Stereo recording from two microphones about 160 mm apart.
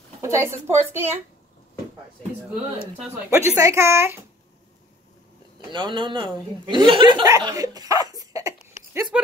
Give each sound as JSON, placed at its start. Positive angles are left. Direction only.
{"t": 0.2, "sound": "a woman's voice", "side_deg": -20}
{"t": 3.3, "sound": "a woman's voice", "side_deg": -15}
{"t": 5.7, "sound": "speech", "side_deg": -30}
{"t": 9.1, "sound": "speech", "side_deg": -5}